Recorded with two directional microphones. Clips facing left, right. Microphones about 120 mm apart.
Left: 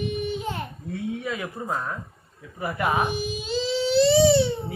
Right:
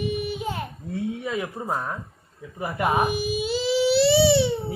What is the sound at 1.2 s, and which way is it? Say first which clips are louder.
Speech: right 2 dB; 15° right (ahead or behind).